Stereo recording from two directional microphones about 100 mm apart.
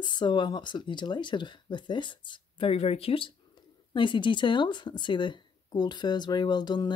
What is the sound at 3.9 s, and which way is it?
Speech, 55° left (ahead or behind).